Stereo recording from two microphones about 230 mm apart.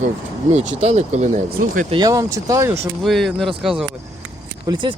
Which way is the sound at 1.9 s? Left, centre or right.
Centre.